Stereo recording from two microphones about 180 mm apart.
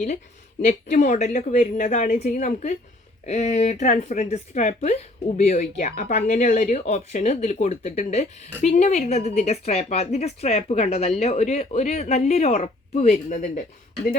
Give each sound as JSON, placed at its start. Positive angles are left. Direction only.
{"t": 0.7, "sound": "speech", "side_deg": 40}